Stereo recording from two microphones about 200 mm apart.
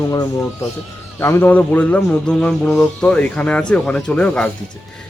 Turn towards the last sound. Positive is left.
turn(degrees=5)  # may be behind; listen again after turning